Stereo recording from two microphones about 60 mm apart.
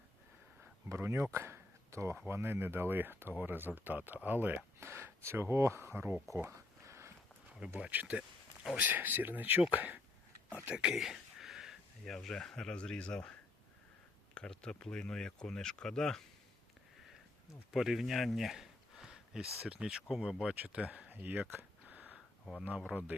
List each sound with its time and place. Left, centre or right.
0.9 s speech: right
4.8 s speech: right
6.8 s a sound: right
7.9 s speech: right
10.9 s a sound: centre
12.1 s speech: centre
14.3 s speech: centre
17.7 s speech: centre
21.1 s speech: right
21.5 s a sound: right
22.9 s speech: centre